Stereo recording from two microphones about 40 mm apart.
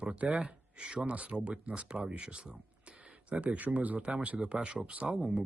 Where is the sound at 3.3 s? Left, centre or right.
Right.